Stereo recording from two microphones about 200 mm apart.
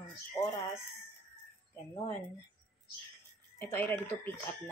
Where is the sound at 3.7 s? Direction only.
10° left (ahead or behind).